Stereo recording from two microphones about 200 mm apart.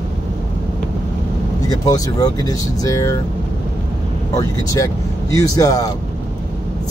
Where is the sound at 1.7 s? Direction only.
20° left (ahead or behind).